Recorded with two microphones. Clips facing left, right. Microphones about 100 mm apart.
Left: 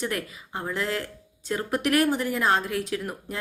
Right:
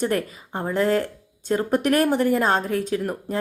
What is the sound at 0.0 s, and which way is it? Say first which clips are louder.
A woman's voice: right 7 dB; 45° right (ahead or behind).